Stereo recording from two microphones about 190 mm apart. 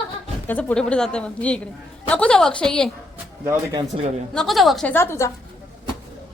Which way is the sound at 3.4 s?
20° right (ahead or behind).